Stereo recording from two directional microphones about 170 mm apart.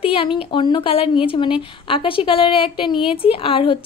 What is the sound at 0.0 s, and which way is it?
A woman's voice, 30° left (ahead or behind).